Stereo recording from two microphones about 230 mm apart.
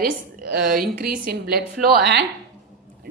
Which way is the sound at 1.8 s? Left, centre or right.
Right.